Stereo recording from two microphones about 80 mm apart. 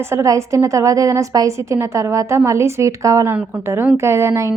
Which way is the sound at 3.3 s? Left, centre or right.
Right.